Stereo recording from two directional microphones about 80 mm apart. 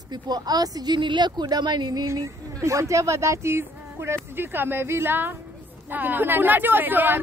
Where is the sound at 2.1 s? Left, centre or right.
Right.